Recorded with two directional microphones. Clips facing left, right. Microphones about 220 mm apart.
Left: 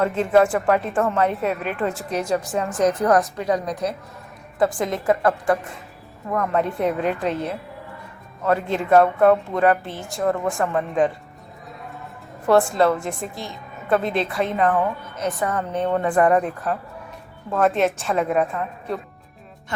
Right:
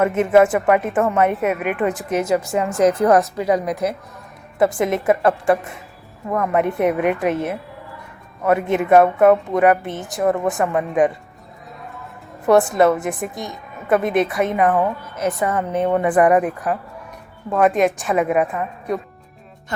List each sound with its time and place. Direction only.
0.4 s a woman's voice: 20° right (ahead or behind)
12.5 s a woman's voice: 20° right (ahead or behind)